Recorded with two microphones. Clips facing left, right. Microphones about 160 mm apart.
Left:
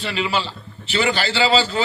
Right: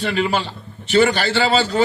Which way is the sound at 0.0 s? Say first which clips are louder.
Right 3 dB; 50° right (ahead or behind).